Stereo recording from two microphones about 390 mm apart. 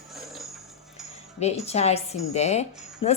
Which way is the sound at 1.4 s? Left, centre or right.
Centre.